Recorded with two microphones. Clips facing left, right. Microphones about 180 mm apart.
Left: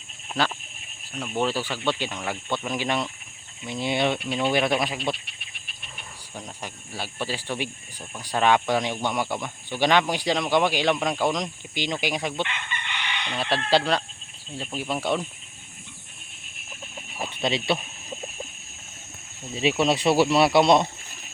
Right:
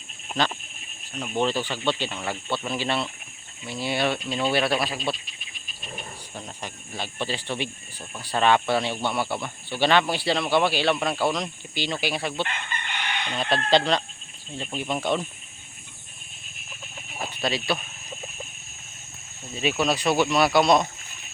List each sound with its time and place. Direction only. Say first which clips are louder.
1.1 s speech: even; 10° right (ahead or behind)
1.4 s speech: right 1 dB; 10° left (ahead or behind)
5.1 s cricket: right 1 dB; 65° left (ahead or behind)
6.3 s speech: left 1 dB; 10° left (ahead or behind)
12.5 s chicken: right 1 dB; 45° right (ahead or behind)
13.3 s speech: right 1 dB; 10° left (ahead or behind)
17.4 s speech: left 2 dB; 25° left (ahead or behind)
19.8 s speech: left 2 dB; 25° left (ahead or behind)